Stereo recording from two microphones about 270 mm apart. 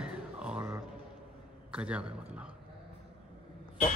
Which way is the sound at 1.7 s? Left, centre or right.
Centre.